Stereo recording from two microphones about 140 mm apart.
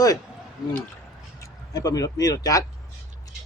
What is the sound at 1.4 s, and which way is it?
Speech, 25° left (ahead or behind).